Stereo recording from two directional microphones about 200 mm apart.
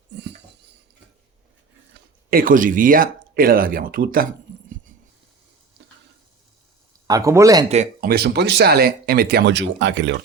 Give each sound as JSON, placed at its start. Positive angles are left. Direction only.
{"t": 2.3, "sound": "speech", "side_deg": -45}
{"t": 7.1, "sound": "speech", "side_deg": -15}
{"t": 8.0, "sound": "speech", "side_deg": -55}